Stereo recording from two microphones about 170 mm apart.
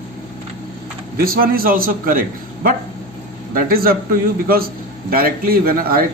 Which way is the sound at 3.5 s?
60° right (ahead or behind).